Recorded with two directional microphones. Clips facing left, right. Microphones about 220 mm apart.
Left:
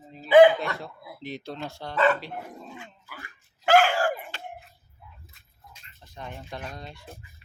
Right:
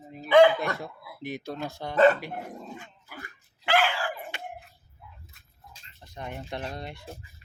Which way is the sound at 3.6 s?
45° left (ahead or behind).